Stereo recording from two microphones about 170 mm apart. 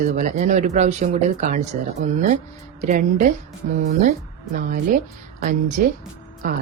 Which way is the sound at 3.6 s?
60° right (ahead or behind).